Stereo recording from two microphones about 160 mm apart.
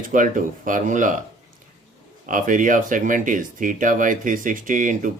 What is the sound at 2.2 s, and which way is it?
Speech, 55° right (ahead or behind).